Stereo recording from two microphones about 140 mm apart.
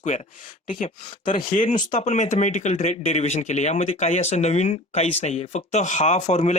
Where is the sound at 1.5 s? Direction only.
65° left (ahead or behind).